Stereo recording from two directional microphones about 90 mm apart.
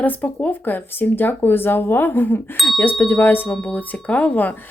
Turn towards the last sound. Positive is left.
turn(degrees=20)  # may be behind; listen again after turning